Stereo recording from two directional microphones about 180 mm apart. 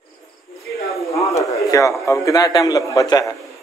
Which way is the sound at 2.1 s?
20° left (ahead or behind).